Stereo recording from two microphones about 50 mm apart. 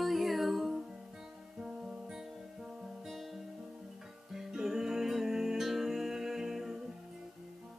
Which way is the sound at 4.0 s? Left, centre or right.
Centre.